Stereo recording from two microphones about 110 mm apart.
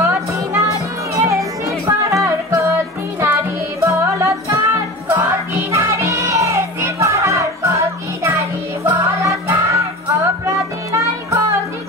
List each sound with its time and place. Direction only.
0.0 s music: 25° right (ahead or behind)
3.8 s music: 25° right (ahead or behind)